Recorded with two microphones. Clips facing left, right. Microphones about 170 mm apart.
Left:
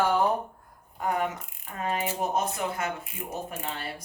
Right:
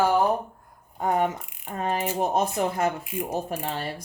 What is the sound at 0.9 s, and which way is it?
Speech, 30° right (ahead or behind).